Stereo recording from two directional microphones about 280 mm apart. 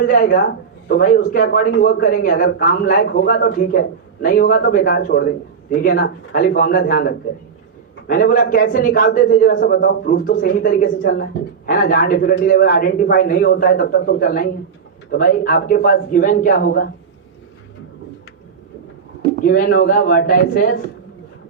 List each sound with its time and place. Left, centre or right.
0.0 s a man's voice: left
19.5 s a man's voice: left